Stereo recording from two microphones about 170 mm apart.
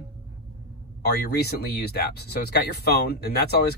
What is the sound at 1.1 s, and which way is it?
Speech, 70° left (ahead or behind).